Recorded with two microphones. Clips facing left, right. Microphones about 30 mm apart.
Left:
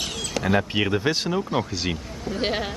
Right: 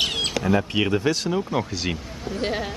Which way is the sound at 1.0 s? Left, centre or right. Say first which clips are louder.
Right 1 dB; centre.